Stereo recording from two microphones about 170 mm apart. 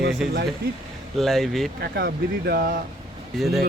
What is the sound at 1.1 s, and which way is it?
Speech, centre (ahead or behind).